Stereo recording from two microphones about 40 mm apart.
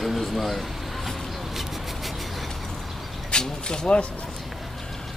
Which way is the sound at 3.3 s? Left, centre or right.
Left.